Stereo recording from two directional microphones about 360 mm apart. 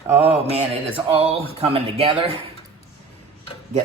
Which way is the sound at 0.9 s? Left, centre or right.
Centre.